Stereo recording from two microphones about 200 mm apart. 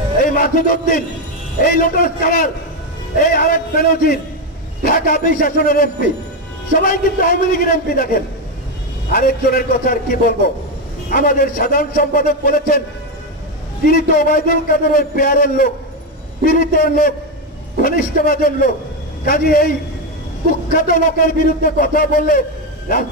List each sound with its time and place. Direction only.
0.3 s a man's voice: 45° left (ahead or behind)
13.8 s speech: 45° left (ahead or behind)